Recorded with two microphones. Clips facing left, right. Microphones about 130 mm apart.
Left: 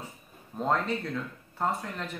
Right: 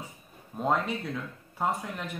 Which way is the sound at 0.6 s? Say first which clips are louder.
Even; 10° right (ahead or behind).